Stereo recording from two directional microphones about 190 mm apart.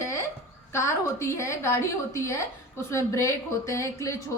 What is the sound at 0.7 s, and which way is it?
Speech, 15° left (ahead or behind).